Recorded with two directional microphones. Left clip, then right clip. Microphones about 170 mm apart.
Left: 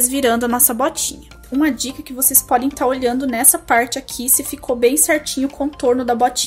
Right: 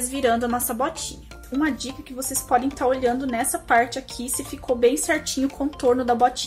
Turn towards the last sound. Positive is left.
turn(degrees=25)  # may be behind; listen again after turning